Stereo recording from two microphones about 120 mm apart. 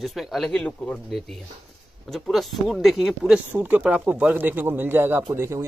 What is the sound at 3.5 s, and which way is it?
Speech, 15° right (ahead or behind).